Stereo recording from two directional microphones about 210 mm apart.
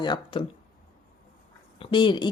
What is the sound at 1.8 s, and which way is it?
Speech, 25° left (ahead or behind).